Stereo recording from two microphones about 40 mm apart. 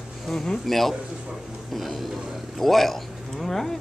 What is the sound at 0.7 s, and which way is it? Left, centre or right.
Speech, centre.